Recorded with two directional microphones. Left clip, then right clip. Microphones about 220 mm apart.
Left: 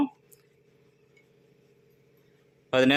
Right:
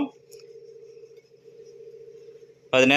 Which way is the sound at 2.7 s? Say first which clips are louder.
Right 4 dB; 10° left (ahead or behind).